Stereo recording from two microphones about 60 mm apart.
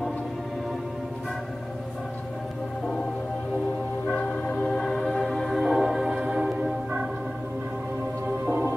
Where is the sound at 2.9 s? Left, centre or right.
Centre.